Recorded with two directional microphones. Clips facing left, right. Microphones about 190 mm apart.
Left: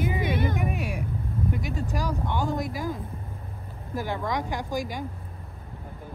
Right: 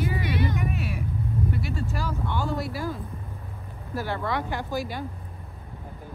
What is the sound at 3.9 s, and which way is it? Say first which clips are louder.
Speech: even; 15° left (ahead or behind).